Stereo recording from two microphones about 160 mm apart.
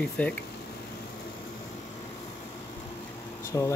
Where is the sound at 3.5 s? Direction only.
20° left (ahead or behind).